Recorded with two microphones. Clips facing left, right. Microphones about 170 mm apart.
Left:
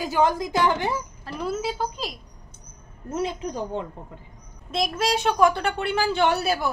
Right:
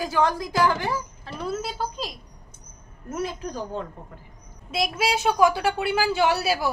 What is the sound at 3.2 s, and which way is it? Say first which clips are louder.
Speech: left 2 dB; 25° left (ahead or behind).